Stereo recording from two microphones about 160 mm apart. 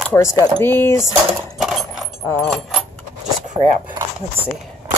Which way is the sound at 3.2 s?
50° right (ahead or behind).